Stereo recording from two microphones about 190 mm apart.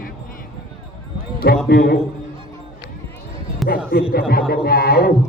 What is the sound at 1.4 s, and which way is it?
Speech, 55° left (ahead or behind).